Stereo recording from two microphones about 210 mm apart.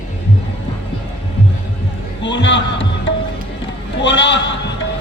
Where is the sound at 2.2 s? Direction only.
60° left (ahead or behind).